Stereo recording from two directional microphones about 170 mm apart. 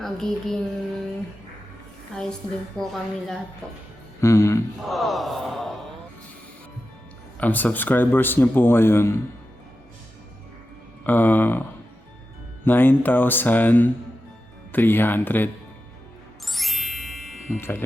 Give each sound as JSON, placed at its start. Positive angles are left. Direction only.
{"t": 0.0, "sound": "speech", "side_deg": 0}
{"t": 2.1, "sound": "a sound", "side_deg": 5}
{"t": 4.2, "sound": "a man's voice", "side_deg": 15}
{"t": 4.9, "sound": "a sound", "side_deg": 0}
{"t": 7.3, "sound": "a man's voice", "side_deg": 10}
{"t": 11.0, "sound": "a man's voice", "side_deg": 10}
{"t": 12.6, "sound": "a man's voice", "side_deg": 10}
{"t": 16.5, "sound": "music", "side_deg": 0}
{"t": 17.6, "sound": "a man's voice", "side_deg": 10}